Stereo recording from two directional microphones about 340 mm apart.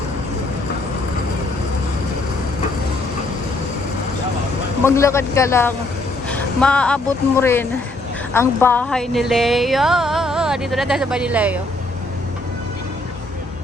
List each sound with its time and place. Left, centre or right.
4.8 s speech: centre